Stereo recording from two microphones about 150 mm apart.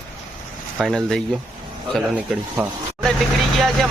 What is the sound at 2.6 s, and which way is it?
Speech, 5° right (ahead or behind).